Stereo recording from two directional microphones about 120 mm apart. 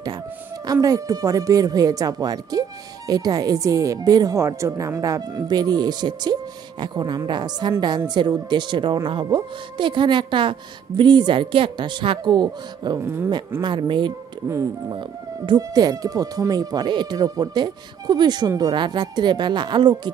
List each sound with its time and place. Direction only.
0.7 s speech: 30° right (ahead or behind)
13.0 s speech: 20° right (ahead or behind)
13.6 s speech: 40° right (ahead or behind)